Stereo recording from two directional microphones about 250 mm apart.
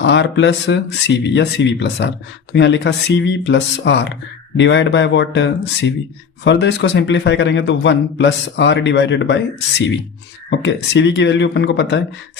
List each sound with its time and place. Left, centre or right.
0.0 s a man's voice: left